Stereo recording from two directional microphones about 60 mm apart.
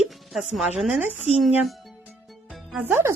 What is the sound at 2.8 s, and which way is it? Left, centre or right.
Speech, right.